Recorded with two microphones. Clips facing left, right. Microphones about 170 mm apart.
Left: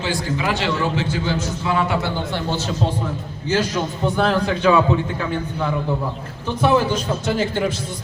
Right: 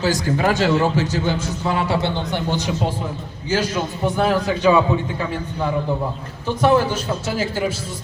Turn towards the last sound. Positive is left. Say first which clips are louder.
# left 2 dB
turn(degrees=-5)  # may be behind; listen again after turning